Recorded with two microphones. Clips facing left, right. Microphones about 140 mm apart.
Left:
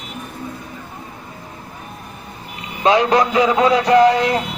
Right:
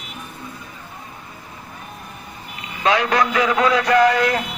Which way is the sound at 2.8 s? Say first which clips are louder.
Left 4 dB; 25° left (ahead or behind).